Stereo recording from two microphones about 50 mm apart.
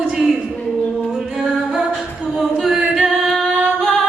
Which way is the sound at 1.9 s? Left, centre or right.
Centre.